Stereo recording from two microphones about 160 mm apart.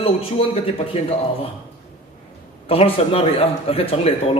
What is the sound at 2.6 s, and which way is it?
A man's voice, 35° left (ahead or behind).